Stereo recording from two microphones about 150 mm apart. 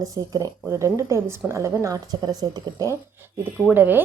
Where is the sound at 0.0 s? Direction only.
25° right (ahead or behind).